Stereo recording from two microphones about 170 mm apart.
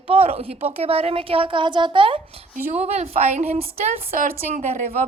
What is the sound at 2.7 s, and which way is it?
A woman's voice, 40° right (ahead or behind).